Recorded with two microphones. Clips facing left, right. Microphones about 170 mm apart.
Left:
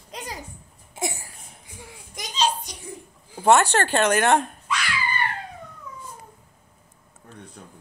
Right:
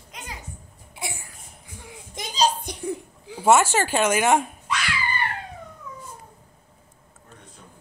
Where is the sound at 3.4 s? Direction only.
5° right (ahead or behind).